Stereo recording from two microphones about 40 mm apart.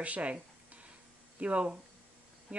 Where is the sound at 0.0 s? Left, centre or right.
Right.